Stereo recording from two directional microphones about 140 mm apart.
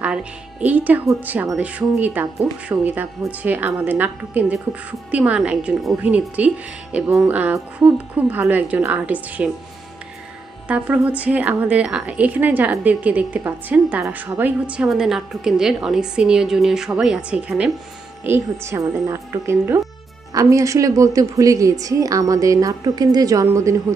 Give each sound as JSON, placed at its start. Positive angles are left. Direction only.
{"t": 0.0, "sound": "a woman's voice", "side_deg": -10}
{"t": 10.7, "sound": "a woman's voice", "side_deg": -10}